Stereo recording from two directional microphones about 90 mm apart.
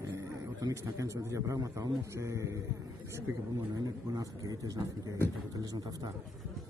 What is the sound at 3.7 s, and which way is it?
A man's voice, 40° right (ahead or behind).